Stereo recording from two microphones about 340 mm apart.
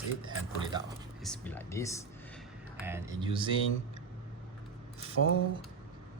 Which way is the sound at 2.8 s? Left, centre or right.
Centre.